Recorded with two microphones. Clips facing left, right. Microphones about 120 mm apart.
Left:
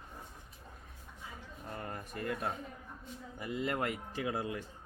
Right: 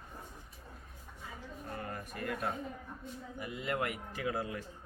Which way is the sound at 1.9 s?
25° left (ahead or behind).